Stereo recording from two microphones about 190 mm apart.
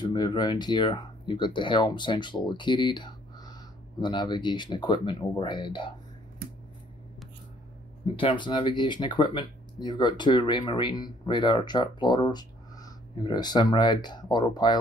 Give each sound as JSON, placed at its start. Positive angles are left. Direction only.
{"t": 0.0, "sound": "speech", "side_deg": 20}
{"t": 8.0, "sound": "speech", "side_deg": 30}